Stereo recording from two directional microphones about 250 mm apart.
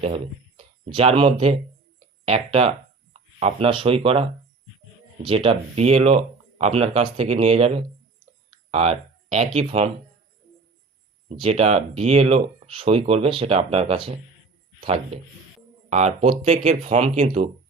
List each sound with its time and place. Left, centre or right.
0.0 s speech: right
8.7 s speech: right
11.3 s speech: right